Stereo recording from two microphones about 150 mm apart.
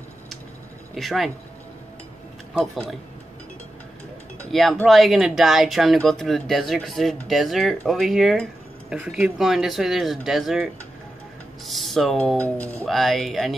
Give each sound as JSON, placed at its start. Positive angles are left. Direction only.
{"t": 0.9, "sound": "speech", "side_deg": 0}
{"t": 2.5, "sound": "speech", "side_deg": 0}
{"t": 4.5, "sound": "speech", "side_deg": 0}